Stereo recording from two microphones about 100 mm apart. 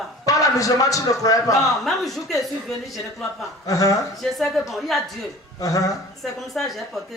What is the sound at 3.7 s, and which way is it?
Speech, 35° left (ahead or behind).